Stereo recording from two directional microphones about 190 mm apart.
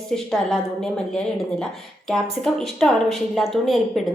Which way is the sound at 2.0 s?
5° left (ahead or behind).